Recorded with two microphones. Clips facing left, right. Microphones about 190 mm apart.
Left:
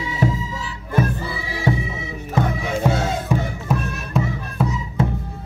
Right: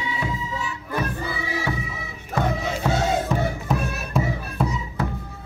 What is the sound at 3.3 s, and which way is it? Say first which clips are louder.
Music: left 2 dB; 10° left (ahead or behind).